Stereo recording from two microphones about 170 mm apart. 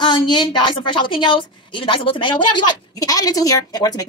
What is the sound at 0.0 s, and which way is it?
A woman's voice, 25° left (ahead or behind).